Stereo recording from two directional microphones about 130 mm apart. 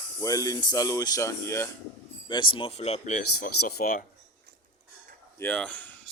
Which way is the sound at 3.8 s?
90° left.